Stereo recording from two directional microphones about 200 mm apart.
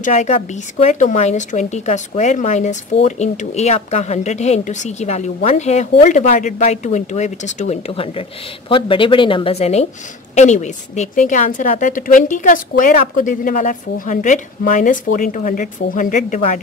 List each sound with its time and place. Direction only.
0.0 s speech: 35° left (ahead or behind)